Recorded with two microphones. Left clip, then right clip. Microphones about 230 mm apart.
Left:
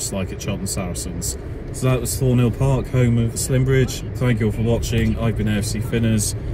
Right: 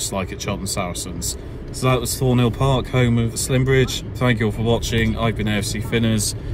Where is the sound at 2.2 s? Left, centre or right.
Centre.